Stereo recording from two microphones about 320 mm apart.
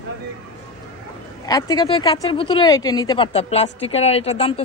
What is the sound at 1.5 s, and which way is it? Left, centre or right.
Speech, centre.